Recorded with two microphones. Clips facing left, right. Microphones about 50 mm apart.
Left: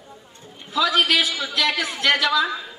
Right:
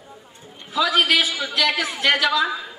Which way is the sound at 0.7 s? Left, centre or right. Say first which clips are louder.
Right 1 dB; centre.